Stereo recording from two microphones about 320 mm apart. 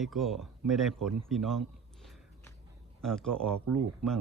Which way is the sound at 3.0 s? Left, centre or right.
Centre.